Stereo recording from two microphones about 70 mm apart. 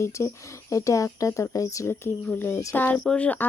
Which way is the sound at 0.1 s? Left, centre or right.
Left.